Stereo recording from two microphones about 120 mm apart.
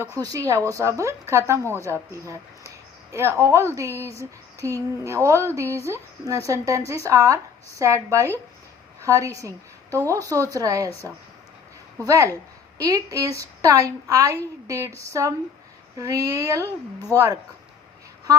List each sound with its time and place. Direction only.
0.2 s a woman's voice: 30° right (ahead or behind)